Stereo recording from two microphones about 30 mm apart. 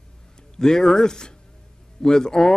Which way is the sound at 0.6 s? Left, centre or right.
Left.